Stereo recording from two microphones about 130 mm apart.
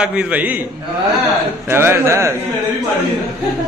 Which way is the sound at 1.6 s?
15° right (ahead or behind).